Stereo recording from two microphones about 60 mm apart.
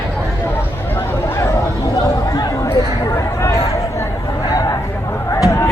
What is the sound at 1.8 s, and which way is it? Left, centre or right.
Chatter, left.